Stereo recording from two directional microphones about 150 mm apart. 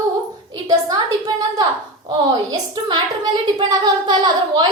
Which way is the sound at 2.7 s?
30° right (ahead or behind).